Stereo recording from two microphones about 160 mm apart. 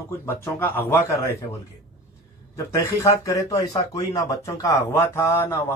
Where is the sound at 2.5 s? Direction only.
20° left (ahead or behind).